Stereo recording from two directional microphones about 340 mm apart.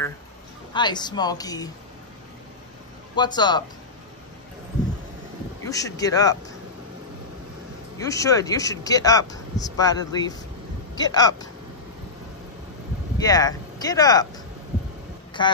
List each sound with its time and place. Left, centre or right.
0.7 s speech: centre
3.2 s speech: centre
5.7 s speech: centre
8.0 s speech: centre
13.2 s speech: centre
15.4 s speech: centre